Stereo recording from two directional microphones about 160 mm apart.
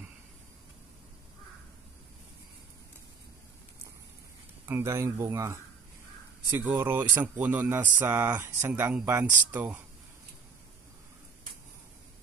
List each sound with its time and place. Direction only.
4.6 s speech: 15° right (ahead or behind)
6.8 s speech: 15° right (ahead or behind)